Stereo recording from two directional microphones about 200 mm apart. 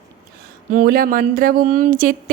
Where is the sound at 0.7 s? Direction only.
45° right (ahead or behind).